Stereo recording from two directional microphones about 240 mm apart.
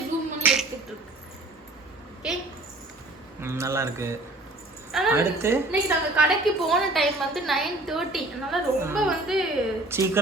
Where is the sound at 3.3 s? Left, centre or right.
Centre.